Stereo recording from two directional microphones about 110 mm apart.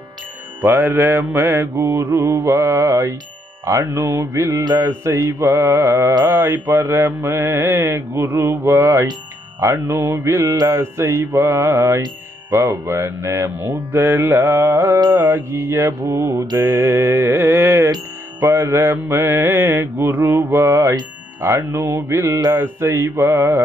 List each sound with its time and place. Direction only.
0.6 s mantra: 20° right (ahead or behind)